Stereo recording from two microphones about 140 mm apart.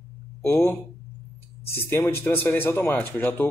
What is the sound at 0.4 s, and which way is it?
A man's voice, 15° left (ahead or behind).